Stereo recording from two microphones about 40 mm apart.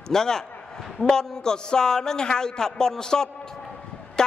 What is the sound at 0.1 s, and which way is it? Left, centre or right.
A man's voice, centre.